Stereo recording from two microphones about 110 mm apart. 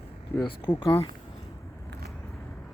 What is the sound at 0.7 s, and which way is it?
Speech, 55° left (ahead or behind).